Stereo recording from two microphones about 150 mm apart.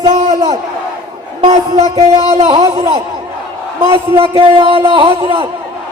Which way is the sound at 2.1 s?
45° right (ahead or behind).